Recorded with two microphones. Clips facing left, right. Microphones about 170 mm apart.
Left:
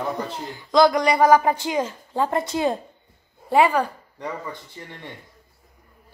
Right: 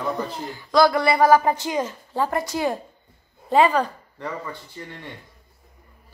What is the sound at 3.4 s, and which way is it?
Speech, 10° left (ahead or behind).